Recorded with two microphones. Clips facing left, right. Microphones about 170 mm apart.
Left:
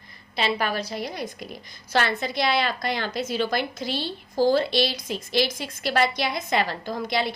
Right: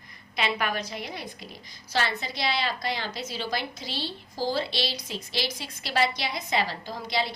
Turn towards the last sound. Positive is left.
turn(degrees=55)  # may be behind; listen again after turning